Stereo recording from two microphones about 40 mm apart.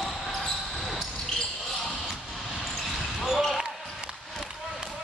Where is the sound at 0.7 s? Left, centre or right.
Centre.